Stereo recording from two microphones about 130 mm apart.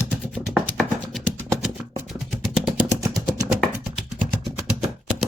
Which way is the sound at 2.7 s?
25° right (ahead or behind).